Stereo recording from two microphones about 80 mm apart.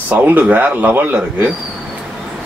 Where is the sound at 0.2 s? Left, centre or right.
Right.